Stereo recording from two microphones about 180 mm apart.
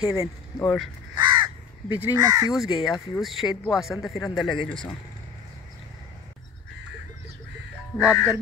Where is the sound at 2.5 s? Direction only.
Centre (ahead or behind).